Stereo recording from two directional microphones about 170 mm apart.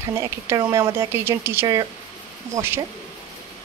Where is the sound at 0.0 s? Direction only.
15° right (ahead or behind).